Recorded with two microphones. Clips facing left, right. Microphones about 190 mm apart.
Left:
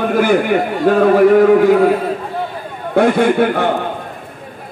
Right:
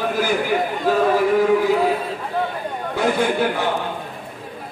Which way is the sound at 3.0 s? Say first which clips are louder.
Left 8 dB; 60° left (ahead or behind).